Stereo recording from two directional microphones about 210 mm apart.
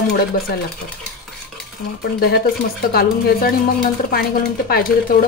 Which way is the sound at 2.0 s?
50° left (ahead or behind).